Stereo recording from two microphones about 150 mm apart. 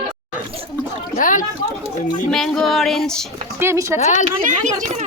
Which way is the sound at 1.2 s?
60° left (ahead or behind).